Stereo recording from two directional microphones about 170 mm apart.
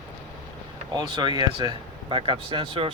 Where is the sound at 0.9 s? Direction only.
25° right (ahead or behind).